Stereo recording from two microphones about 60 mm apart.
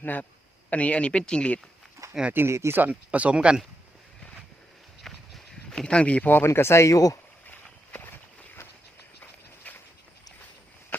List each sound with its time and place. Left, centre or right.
0.0 s speech: left
2.3 s speech: right
2.7 s speech: right
5.0 s clip-clop: centre
5.7 s speech: centre
6.3 s speech: left
9.7 s a sound: left